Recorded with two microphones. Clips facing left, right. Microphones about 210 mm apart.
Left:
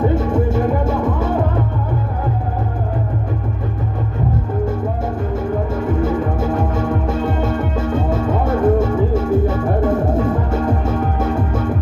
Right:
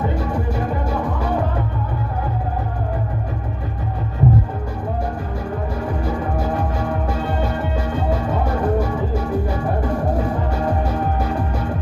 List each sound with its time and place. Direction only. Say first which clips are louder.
0.1 s music: left 6 dB; 25° left (ahead or behind)
5.7 s music: left 6 dB; 25° left (ahead or behind)